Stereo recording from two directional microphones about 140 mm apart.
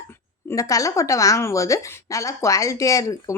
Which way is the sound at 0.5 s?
25° left (ahead or behind).